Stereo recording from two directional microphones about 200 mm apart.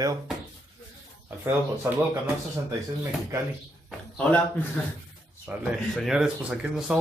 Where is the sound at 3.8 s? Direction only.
5° left (ahead or behind).